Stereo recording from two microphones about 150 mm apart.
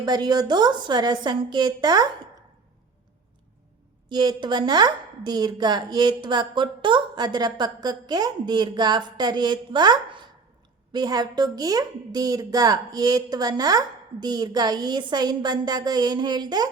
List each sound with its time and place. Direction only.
0.0 s a woman's voice: 25° right (ahead or behind)
4.1 s a woman's voice: 30° right (ahead or behind)